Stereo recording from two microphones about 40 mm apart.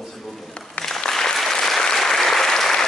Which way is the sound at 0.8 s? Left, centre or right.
Left.